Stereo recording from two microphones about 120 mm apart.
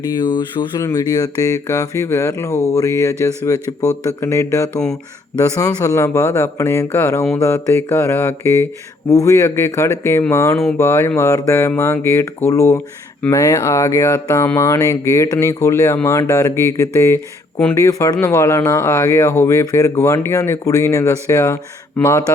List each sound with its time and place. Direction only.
0.2 s speech: 40° left (ahead or behind)
0.8 s speech: 30° left (ahead or behind)